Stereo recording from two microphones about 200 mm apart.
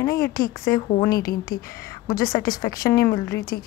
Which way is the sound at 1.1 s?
50° left (ahead or behind).